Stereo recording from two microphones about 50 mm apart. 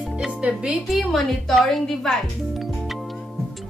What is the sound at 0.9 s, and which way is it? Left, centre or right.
Speech, centre.